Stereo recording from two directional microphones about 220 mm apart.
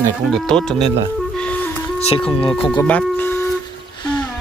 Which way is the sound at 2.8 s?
10° left (ahead or behind).